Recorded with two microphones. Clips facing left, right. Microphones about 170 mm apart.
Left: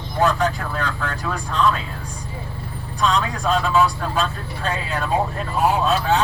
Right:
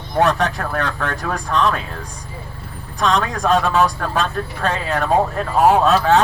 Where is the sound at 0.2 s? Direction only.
75° right (ahead or behind).